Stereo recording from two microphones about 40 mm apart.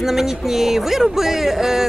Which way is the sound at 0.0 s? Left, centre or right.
Centre.